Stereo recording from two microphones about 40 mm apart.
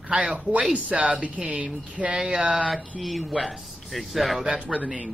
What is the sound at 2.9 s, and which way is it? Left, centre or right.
Speech, centre.